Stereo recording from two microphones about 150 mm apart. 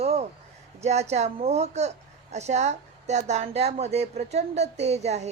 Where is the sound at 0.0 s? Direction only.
45° right (ahead or behind).